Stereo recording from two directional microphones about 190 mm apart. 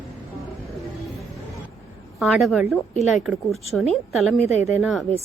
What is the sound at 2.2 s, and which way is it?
Speech, centre (ahead or behind).